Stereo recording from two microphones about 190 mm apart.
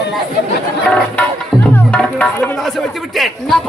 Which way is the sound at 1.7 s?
5° left (ahead or behind).